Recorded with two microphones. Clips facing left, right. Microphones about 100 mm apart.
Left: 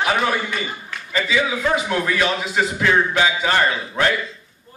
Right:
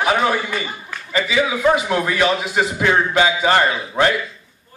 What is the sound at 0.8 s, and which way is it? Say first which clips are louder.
A man's voice: right 2 dB; 15° right (ahead or behind).